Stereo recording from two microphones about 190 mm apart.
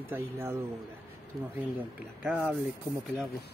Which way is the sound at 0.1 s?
10° right (ahead or behind).